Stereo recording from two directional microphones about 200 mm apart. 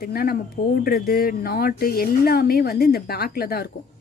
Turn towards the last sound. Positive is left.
turn(degrees=50)  # may be behind; listen again after turning